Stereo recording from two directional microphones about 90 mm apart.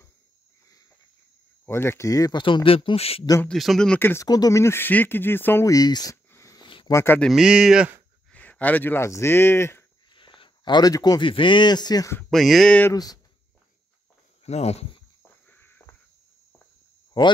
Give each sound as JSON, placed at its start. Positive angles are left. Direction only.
{"t": 1.7, "sound": "speech", "side_deg": 30}
{"t": 2.3, "sound": "speech", "side_deg": 65}
{"t": 3.4, "sound": "speech", "side_deg": 0}
{"t": 4.2, "sound": "speech", "side_deg": 40}
{"t": 5.7, "sound": "speech", "side_deg": 45}
{"t": 6.9, "sound": "speech", "side_deg": 30}
{"t": 7.3, "sound": "speech", "side_deg": -5}
{"t": 8.3, "sound": "speech", "side_deg": 15}
{"t": 10.1, "sound": "a sound", "side_deg": 65}
{"t": 11.1, "sound": "speech", "side_deg": 65}
{"t": 12.3, "sound": "speech", "side_deg": 0}
{"t": 12.9, "sound": "speech", "side_deg": 45}
{"t": 15.4, "sound": "a sound", "side_deg": 20}
{"t": 17.1, "sound": "speech", "side_deg": 55}